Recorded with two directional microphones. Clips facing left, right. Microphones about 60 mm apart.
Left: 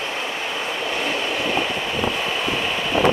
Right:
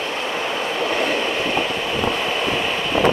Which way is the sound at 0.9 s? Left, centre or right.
Centre.